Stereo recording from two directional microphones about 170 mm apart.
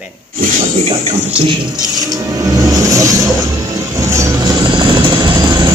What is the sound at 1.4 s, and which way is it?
Music, 25° right (ahead or behind).